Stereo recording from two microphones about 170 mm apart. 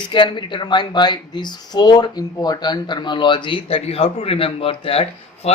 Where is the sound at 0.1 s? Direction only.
30° left (ahead or behind).